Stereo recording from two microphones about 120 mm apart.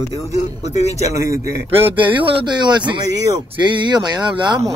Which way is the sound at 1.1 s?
25° right (ahead or behind).